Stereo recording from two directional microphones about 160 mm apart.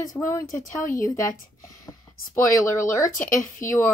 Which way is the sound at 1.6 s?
20° left (ahead or behind).